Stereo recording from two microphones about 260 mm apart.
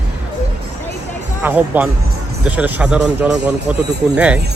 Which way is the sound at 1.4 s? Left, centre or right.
Centre.